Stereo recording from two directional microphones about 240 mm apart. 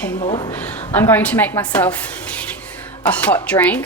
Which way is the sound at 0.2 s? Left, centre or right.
Left.